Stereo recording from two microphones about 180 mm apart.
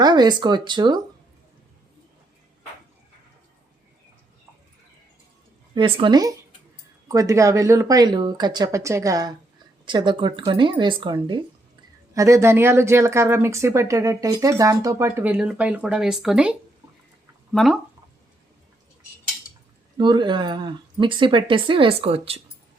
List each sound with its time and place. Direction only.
0.0 s speech: 25° right (ahead or behind)
5.7 s speech: 25° right (ahead or behind); by 17.7 s centre (ahead or behind)
20.0 s speech: 25° right (ahead or behind)